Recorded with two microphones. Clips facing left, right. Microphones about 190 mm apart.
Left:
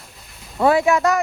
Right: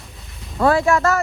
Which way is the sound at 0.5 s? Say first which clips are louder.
Even; centre (ahead or behind).